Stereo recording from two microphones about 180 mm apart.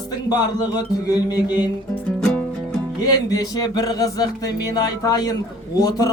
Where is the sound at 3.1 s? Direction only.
20° left (ahead or behind).